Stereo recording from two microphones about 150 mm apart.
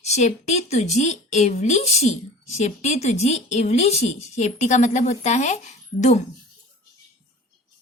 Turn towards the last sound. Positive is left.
turn(degrees=50)  # may be behind; listen again after turning